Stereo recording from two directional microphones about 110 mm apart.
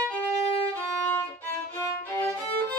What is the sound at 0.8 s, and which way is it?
Violin, 15° left (ahead or behind).